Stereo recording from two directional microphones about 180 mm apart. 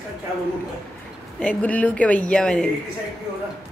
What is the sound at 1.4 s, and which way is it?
A woman's voice, 10° left (ahead or behind).